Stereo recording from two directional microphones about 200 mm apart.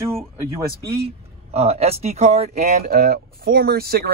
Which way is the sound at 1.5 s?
30° right (ahead or behind).